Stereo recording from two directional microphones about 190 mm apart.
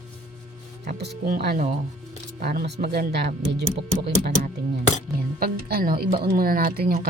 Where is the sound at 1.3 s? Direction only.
50° right (ahead or behind).